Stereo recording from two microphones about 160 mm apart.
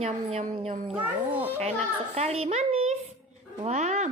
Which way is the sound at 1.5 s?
40° right (ahead or behind).